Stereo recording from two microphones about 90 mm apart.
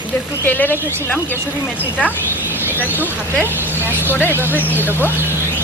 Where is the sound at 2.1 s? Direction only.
25° left (ahead or behind).